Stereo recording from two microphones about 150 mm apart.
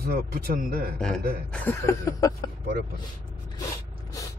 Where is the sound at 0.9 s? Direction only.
5° left (ahead or behind); by 2.5 s 25° left (ahead or behind).